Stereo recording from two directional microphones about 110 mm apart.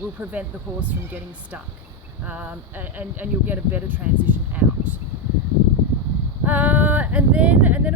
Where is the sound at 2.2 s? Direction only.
15° right (ahead or behind).